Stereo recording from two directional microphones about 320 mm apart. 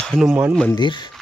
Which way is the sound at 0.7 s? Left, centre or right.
Centre.